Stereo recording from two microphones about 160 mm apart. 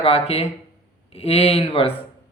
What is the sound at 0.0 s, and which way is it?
Speech, 40° left (ahead or behind).